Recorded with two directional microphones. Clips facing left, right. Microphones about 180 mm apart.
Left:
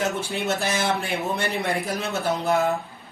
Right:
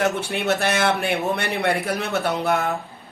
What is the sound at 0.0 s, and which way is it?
Speech, 65° right (ahead or behind).